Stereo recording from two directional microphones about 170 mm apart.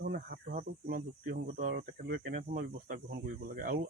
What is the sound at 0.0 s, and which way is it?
Speech, 60° right (ahead or behind).